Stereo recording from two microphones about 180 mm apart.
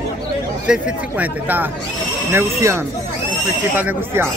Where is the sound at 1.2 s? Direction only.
10° right (ahead or behind).